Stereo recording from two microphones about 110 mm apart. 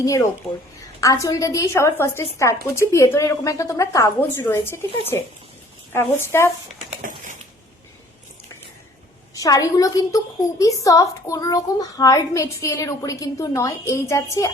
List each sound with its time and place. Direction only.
0.0 s a woman's voice: 30° left (ahead or behind)
9.3 s a child's voice: 30° left (ahead or behind)